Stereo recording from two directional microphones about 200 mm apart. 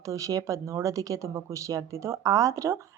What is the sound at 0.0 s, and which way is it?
A woman's voice, 15° right (ahead or behind).